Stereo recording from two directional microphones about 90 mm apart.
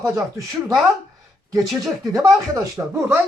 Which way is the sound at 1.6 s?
5° right (ahead or behind).